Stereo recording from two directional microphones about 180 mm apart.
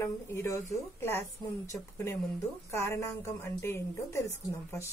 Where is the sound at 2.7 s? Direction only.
15° left (ahead or behind).